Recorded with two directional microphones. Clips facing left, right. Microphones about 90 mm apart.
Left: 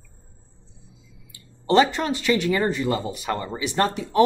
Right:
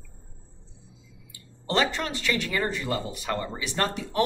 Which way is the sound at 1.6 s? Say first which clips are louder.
Left 7 dB; 20° left (ahead or behind).